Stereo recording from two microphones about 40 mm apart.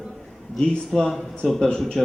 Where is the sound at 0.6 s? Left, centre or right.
Centre.